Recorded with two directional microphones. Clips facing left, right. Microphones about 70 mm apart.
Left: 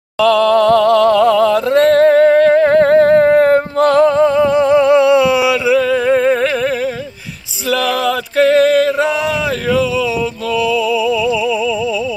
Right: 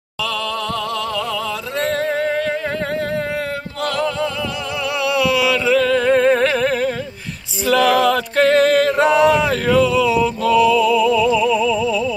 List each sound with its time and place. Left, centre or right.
0.2 s a sound: left
5.7 s humming: centre
7.6 s music: centre